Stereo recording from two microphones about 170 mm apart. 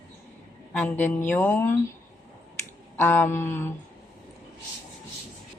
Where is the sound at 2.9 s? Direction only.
15° left (ahead or behind).